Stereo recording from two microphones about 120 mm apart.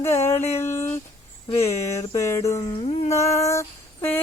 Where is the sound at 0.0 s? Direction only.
20° left (ahead or behind).